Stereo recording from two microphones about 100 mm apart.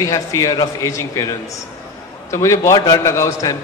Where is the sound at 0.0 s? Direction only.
35° left (ahead or behind).